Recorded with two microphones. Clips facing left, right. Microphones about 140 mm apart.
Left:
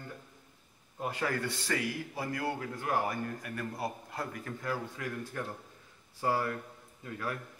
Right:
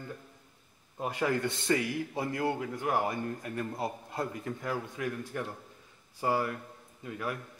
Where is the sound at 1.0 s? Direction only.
20° right (ahead or behind).